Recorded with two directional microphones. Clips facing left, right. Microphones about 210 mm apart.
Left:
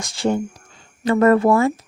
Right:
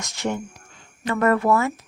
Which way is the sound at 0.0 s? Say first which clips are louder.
Left 6 dB; 30° left (ahead or behind).